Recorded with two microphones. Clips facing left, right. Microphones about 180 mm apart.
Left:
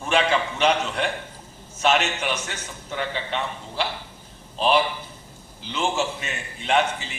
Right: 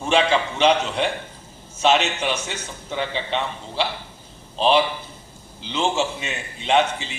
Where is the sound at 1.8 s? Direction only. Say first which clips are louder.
Right 3 dB; 30° right (ahead or behind).